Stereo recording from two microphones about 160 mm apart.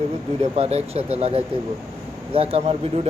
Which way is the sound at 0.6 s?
40° right (ahead or behind).